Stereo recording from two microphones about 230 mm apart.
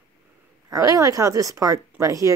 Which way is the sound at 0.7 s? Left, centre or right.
Centre.